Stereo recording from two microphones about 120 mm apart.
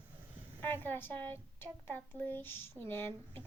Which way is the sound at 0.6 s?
15° left (ahead or behind).